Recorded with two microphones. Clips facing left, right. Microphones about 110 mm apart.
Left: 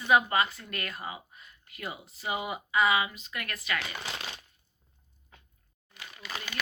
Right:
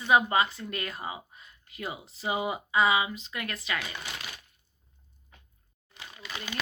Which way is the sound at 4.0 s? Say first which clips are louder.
Left 2 dB; 25° left (ahead or behind).